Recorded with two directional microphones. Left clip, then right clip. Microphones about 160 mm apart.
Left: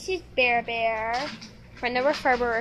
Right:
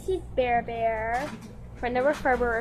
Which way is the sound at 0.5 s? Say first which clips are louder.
Left 1 dB; 10° left (ahead or behind).